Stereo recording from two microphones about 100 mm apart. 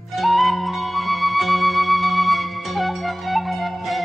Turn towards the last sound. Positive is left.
turn(degrees=0)  # may be behind; listen again after turning